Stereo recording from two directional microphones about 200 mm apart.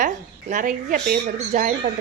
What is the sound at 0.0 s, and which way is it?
A woman's voice, 40° right (ahead or behind).